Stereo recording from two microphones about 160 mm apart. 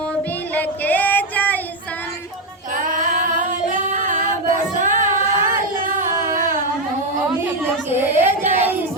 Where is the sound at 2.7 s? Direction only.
55° right (ahead or behind).